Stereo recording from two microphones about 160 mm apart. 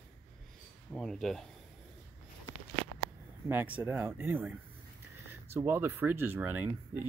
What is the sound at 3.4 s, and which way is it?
Speech, 10° right (ahead or behind).